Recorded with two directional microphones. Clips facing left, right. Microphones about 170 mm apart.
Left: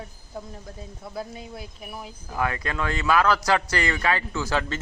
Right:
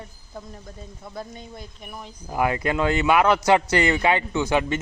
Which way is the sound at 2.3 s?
25° right (ahead or behind).